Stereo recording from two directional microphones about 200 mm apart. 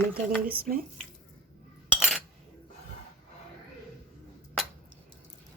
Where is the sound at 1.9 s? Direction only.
Centre (ahead or behind).